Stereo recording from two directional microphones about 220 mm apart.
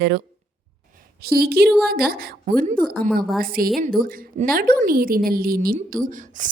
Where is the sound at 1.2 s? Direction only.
45° right (ahead or behind).